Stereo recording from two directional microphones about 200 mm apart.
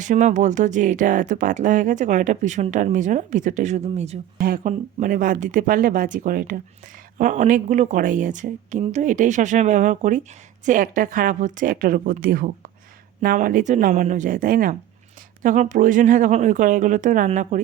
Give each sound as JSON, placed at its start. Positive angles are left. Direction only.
{"t": 0.0, "sound": "speech", "side_deg": -40}